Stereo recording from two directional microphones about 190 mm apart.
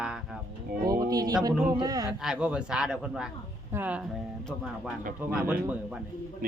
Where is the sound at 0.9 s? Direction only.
20° right (ahead or behind).